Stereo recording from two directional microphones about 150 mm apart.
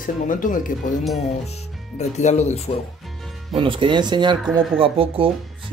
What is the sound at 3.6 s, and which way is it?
Speech, 35° right (ahead or behind).